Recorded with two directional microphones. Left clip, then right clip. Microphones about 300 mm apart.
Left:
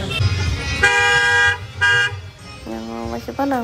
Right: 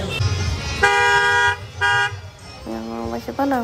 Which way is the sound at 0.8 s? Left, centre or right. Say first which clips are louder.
Left 1 dB; right.